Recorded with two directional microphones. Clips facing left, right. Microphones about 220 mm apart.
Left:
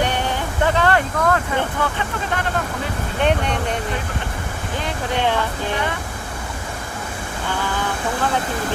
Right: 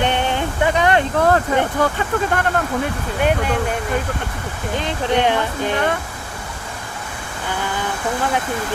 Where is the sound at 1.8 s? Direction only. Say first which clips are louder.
Right 5 dB; 40° right (ahead or behind).